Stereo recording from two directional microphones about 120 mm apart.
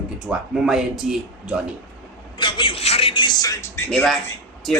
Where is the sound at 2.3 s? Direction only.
45° left (ahead or behind).